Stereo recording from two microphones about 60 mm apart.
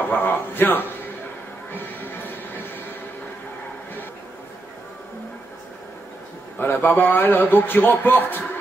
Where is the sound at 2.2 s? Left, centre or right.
Left.